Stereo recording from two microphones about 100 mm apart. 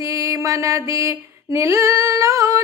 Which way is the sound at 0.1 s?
30° right (ahead or behind).